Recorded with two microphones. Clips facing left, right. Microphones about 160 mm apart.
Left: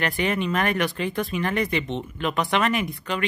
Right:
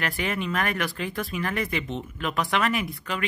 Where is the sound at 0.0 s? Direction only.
Centre (ahead or behind).